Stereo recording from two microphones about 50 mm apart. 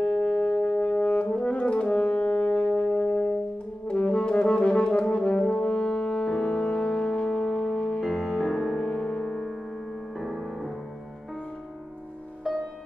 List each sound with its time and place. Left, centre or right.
0.0 s brass instrument: centre
2.7 s music: centre
3.8 s brass instrument: left
8.0 s music: centre
8.5 s music: centre
8.8 s gong: centre
10.1 s music: centre